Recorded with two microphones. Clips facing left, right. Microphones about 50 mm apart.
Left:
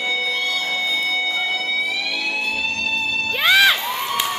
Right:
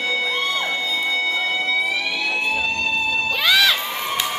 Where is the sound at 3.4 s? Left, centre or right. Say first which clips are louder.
Left 3 dB; left.